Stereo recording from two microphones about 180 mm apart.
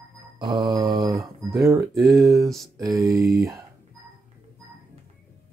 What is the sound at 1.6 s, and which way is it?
Speech, 20° right (ahead or behind).